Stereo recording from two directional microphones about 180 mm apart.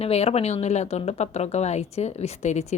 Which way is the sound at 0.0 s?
35° left (ahead or behind).